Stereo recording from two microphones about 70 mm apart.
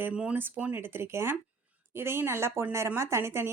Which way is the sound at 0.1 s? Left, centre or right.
Centre.